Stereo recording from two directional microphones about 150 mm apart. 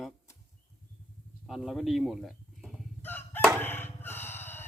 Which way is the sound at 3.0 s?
15° left (ahead or behind).